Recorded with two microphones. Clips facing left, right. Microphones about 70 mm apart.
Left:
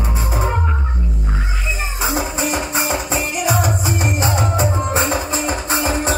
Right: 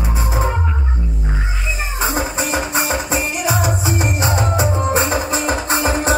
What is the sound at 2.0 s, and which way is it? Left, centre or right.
Music, centre.